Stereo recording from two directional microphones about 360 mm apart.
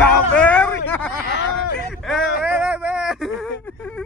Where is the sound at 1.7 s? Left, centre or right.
Centre.